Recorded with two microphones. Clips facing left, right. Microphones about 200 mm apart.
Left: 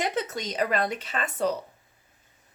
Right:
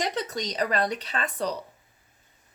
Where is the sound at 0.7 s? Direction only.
50° left (ahead or behind).